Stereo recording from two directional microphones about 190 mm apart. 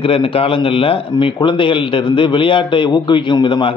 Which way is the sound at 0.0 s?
30° left (ahead or behind).